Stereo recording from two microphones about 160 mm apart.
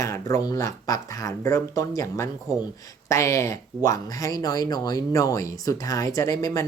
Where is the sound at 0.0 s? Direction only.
20° left (ahead or behind).